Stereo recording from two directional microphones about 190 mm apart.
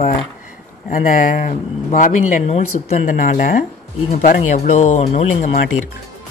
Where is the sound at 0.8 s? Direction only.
45° left (ahead or behind).